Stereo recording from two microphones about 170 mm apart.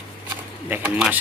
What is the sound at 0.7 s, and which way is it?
Speech, 10° right (ahead or behind).